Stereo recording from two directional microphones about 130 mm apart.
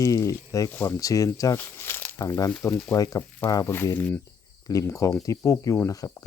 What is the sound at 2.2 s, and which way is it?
Speech, 25° left (ahead or behind).